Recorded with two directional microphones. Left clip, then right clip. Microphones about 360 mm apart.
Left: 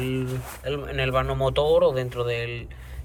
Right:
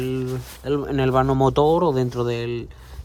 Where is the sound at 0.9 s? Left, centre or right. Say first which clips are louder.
Right 5 dB; centre.